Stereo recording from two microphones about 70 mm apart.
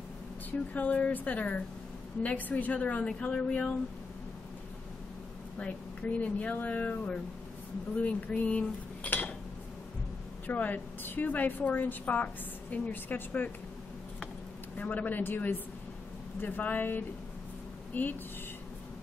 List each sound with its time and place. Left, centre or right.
0.5 s a woman's voice: left
5.6 s a woman's voice: centre
10.4 s a woman's voice: left
14.8 s a woman's voice: left